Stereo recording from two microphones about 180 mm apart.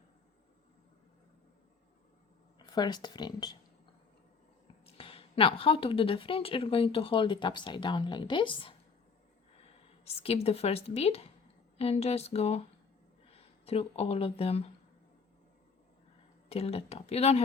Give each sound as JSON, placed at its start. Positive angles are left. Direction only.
{"t": 2.6, "sound": "speech", "side_deg": 25}
{"t": 4.9, "sound": "speech", "side_deg": 30}
{"t": 10.2, "sound": "a woman's voice", "side_deg": 35}
{"t": 16.5, "sound": "a woman's voice", "side_deg": 35}